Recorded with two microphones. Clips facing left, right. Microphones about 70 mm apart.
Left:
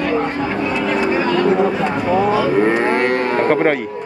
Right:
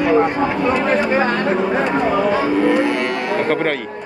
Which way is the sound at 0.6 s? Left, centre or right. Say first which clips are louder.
Right 1 dB; right.